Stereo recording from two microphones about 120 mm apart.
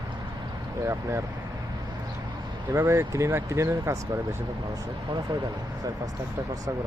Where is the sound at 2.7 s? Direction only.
20° right (ahead or behind).